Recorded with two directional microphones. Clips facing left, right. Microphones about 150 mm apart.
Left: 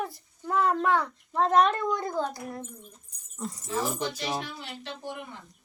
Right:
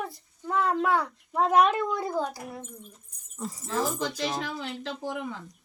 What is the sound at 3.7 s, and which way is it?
Speech, 90° right.